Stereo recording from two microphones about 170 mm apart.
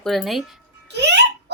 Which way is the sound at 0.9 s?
85° right.